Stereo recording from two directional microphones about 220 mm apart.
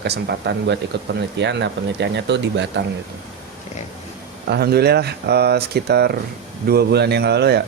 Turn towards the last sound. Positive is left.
turn(degrees=-50)  # may be behind; listen again after turning